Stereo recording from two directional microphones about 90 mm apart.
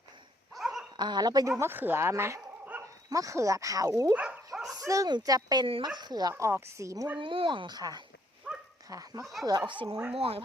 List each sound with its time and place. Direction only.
0.5 s dog: 5° right (ahead or behind)
0.9 s speech: 55° right (ahead or behind)
1.5 s speech: 25° right (ahead or behind); by 4.1 s 40° right (ahead or behind)
4.1 s speech: 15° right (ahead or behind)
4.7 s bow-wow: 40° right (ahead or behind)
5.0 s speech: 50° right (ahead or behind)
6.3 s speech: 30° right (ahead or behind)
7.2 s speech: 70° right (ahead or behind); by 8.0 s 50° right (ahead or behind)
8.5 s dog: 10° right (ahead or behind)
8.9 s speech: 40° right (ahead or behind)
9.4 s speech: 50° right (ahead or behind)
10.1 s speech: 90° right